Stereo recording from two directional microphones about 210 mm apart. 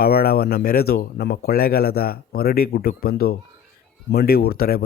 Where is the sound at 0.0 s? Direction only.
45° left (ahead or behind).